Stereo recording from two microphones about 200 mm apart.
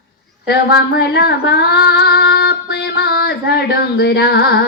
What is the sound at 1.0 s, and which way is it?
Female singing, 55° left (ahead or behind).